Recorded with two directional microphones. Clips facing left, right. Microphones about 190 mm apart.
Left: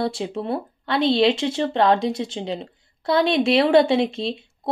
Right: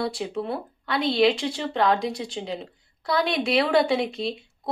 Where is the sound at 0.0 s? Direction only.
25° left (ahead or behind).